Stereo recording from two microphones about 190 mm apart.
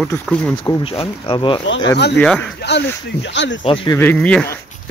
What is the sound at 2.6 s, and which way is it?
Speech, 65° left (ahead or behind).